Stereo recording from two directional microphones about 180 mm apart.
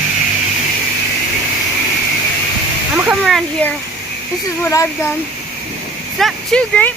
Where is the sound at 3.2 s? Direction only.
5° left (ahead or behind).